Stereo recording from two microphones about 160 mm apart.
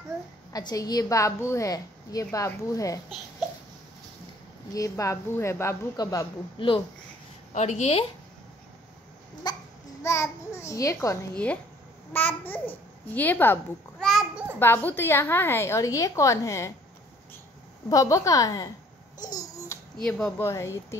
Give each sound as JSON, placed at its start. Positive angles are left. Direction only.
{"t": 0.5, "sound": "a woman's voice", "side_deg": 25}
{"t": 4.7, "sound": "a woman's voice", "side_deg": 20}
{"t": 7.5, "sound": "a woman's voice", "side_deg": 45}
{"t": 9.5, "sound": "a woman's voice", "side_deg": 25}
{"t": 14.0, "sound": "a sound", "side_deg": 0}
{"t": 14.6, "sound": "a woman's voice", "side_deg": 10}
{"t": 17.8, "sound": "a woman's voice", "side_deg": 20}
{"t": 19.1, "sound": "babbling", "side_deg": 25}
{"t": 20.0, "sound": "speech", "side_deg": 5}
{"t": 20.4, "sound": "a woman's voice", "side_deg": 15}